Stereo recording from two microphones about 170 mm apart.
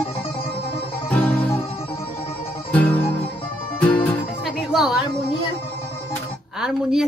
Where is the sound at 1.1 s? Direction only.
10° left (ahead or behind).